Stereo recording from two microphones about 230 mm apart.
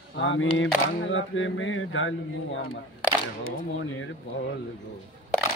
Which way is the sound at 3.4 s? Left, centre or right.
Left.